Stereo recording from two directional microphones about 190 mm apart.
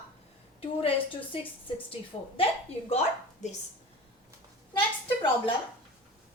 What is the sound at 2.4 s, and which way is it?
Speech, 30° left (ahead or behind).